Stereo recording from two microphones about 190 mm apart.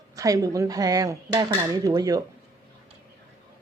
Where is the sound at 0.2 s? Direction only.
20° right (ahead or behind).